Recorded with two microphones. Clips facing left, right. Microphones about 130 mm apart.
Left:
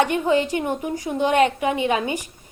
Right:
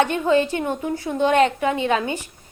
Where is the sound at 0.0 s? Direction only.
15° left (ahead or behind).